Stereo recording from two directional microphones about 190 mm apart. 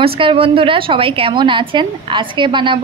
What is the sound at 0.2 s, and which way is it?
Speech, 25° right (ahead or behind).